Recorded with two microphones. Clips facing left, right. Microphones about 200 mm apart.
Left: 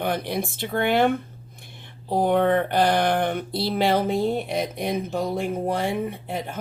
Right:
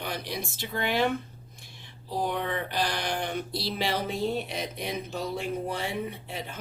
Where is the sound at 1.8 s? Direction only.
55° left (ahead or behind).